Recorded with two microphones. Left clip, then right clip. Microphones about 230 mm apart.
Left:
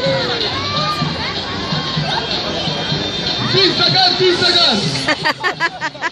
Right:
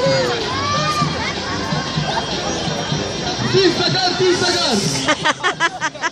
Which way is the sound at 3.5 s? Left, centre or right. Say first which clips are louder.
Left 3 dB; left.